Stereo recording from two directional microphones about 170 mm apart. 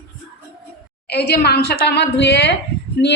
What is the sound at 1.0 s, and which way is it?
A woman's voice, 75° left (ahead or behind).